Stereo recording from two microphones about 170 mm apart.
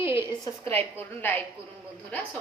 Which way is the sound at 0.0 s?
15° right (ahead or behind).